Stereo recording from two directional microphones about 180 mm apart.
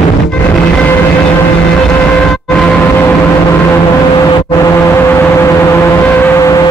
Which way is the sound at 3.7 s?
20° left (ahead or behind).